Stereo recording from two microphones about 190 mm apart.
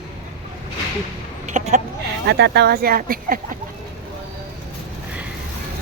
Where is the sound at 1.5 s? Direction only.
40° right (ahead or behind).